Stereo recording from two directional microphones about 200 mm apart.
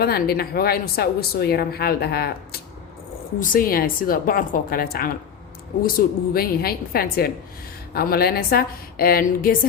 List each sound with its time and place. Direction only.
0.0 s speech: 50° left (ahead or behind)